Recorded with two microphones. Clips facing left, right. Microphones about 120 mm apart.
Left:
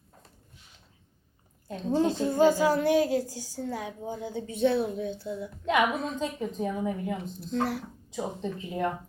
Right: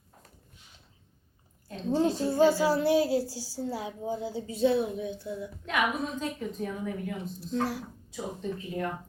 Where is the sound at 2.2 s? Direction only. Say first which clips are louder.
Left 1 dB; 20° left (ahead or behind).